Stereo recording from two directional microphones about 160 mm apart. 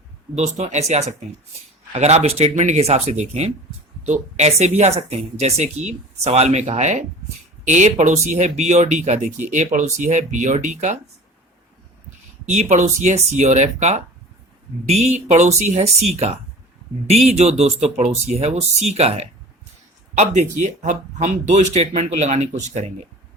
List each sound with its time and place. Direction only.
0.3 s speech: 45° right (ahead or behind)
12.5 s speech: 45° right (ahead or behind)